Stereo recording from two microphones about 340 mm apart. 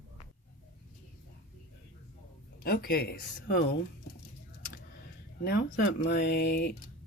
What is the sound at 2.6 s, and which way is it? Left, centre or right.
Speech, left.